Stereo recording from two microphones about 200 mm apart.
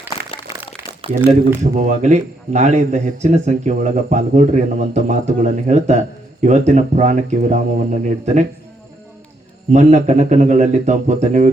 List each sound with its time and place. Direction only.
0.0 s a sound: 10° right (ahead or behind)
1.7 s a man's voice: 35° right (ahead or behind)
9.7 s a man's voice: 35° right (ahead or behind)